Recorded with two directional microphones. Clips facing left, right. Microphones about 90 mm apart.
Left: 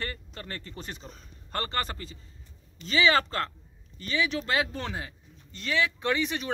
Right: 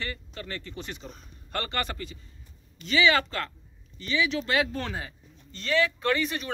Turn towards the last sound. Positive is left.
turn(degrees=20)  # may be behind; listen again after turning